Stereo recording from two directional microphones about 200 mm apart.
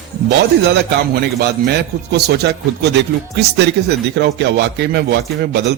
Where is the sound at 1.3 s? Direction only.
55° right (ahead or behind).